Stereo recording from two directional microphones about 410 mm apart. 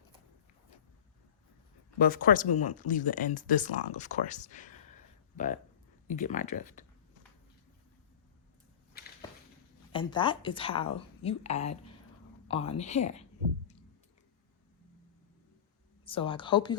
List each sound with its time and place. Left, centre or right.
2.0 s speech: left
6.1 s speech: centre
8.9 s a sound: left
9.9 s a woman's voice: centre
16.0 s a woman's voice: centre